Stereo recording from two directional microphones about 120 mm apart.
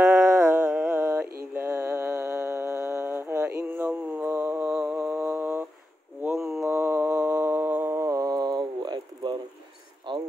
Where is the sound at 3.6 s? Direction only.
10° right (ahead or behind).